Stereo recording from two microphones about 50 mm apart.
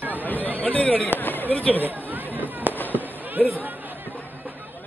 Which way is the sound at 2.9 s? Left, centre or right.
Right.